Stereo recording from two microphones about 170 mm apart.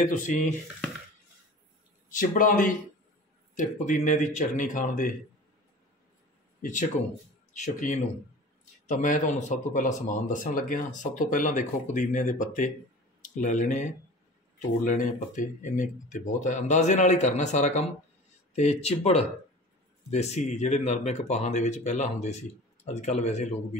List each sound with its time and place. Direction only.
2.0 s speech: 50° left (ahead or behind)
6.6 s speech: 50° left (ahead or behind)